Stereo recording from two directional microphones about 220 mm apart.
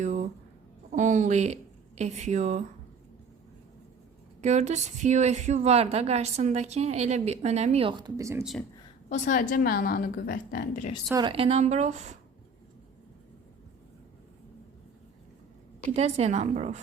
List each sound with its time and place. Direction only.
0.0 s a sound: 35° right (ahead or behind)
0.9 s a woman's voice: 35° right (ahead or behind)
4.4 s a woman's voice: 30° right (ahead or behind); by 8.4 s 15° right (ahead or behind)
9.0 s a woman's voice: 30° left (ahead or behind)
11.1 s a woman's voice: 20° right (ahead or behind)
15.9 s a woman's voice: 30° right (ahead or behind)